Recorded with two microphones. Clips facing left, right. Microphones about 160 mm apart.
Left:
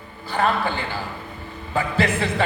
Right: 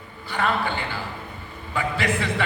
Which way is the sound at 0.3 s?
35° left (ahead or behind).